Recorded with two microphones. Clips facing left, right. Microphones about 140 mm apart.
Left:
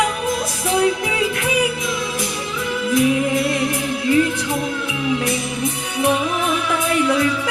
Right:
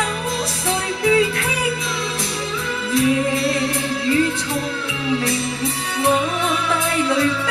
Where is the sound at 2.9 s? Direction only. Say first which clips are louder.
Left 1 dB; 30° right (ahead or behind).